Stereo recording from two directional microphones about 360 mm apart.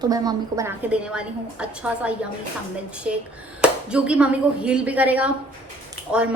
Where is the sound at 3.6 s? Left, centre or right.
Centre.